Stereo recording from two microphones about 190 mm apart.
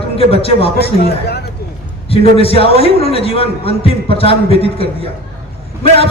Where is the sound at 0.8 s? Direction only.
55° left (ahead or behind).